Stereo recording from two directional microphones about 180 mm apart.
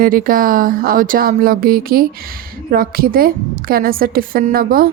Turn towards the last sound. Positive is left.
turn(degrees=-55)  # may be behind; listen again after turning